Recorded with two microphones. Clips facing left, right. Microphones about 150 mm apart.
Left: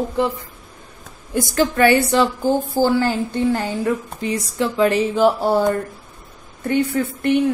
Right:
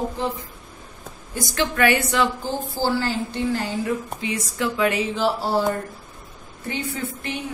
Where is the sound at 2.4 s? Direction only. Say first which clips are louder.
Left 8 dB; 50° left (ahead or behind).